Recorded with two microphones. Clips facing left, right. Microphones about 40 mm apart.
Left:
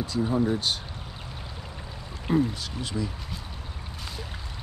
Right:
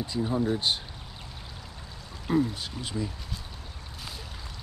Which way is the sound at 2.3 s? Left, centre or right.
Centre.